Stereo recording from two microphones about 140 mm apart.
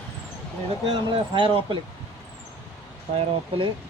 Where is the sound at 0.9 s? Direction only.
35° right (ahead or behind).